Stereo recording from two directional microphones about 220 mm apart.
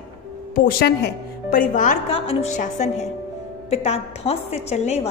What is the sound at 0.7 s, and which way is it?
A woman's voice, 45° left (ahead or behind).